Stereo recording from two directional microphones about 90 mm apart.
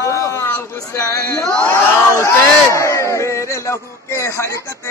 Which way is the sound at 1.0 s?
35° left (ahead or behind).